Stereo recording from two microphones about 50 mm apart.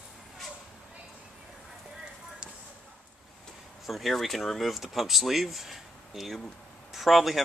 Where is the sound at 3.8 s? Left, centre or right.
Centre.